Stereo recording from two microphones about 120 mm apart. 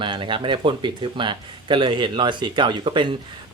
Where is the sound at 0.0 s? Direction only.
45° right (ahead or behind).